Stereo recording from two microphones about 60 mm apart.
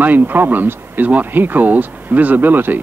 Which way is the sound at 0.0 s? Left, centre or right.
Right.